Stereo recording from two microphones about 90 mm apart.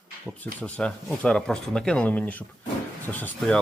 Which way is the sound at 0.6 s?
15° left (ahead or behind).